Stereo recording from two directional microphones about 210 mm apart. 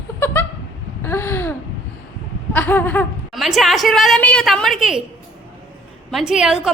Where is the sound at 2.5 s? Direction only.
10° left (ahead or behind).